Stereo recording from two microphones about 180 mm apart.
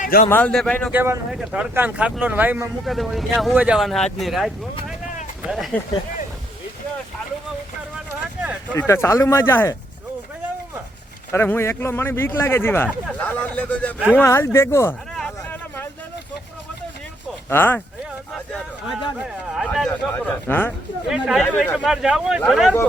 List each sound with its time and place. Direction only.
0.0 s a man's voice: 50° left (ahead or behind)
0.3 s a man's voice: 10° left (ahead or behind)
0.9 s speech: 10° right (ahead or behind)
5.7 s speech: 5° left (ahead or behind)
7.9 s a sound: 5° right (ahead or behind)
8.7 s a man's voice: 15° left (ahead or behind)
11.3 s a man's voice: 10° left (ahead or behind)
15.1 s a sound: centre (ahead or behind)
17.5 s a man's voice: 10° left (ahead or behind)
19.2 s speech: centre (ahead or behind)
21.1 s speech: centre (ahead or behind)